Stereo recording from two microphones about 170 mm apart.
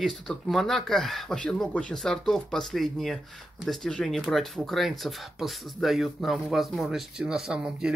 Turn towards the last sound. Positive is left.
turn(degrees=-5)  # may be behind; listen again after turning